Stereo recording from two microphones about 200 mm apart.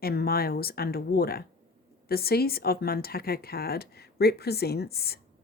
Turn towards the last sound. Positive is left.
turn(degrees=50)  # may be behind; listen again after turning